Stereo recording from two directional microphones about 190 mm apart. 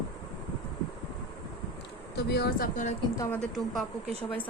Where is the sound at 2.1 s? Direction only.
60° left (ahead or behind); by 3.0 s 40° left (ahead or behind).